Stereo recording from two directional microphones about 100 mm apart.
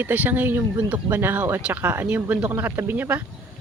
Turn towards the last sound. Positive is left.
turn(degrees=-20)  # may be behind; listen again after turning